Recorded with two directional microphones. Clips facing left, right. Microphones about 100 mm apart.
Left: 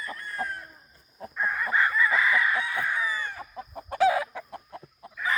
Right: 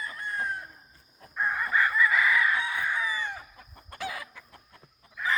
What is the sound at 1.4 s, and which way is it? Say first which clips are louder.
Chicken: even; 10° right (ahead or behind).